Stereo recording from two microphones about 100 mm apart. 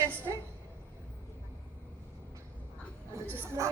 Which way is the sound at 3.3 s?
25° right (ahead or behind).